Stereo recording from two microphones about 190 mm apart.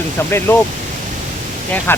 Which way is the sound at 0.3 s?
10° left (ahead or behind).